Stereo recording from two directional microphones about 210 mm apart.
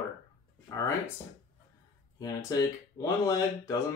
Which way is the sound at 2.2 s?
15° left (ahead or behind).